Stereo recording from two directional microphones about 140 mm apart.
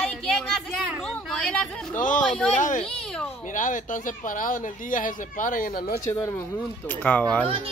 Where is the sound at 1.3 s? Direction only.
5° left (ahead or behind).